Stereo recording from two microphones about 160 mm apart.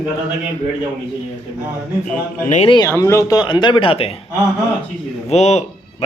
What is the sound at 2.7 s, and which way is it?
Speech, 25° left (ahead or behind).